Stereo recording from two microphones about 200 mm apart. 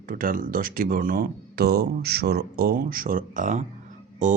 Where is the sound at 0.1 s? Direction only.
45° right (ahead or behind).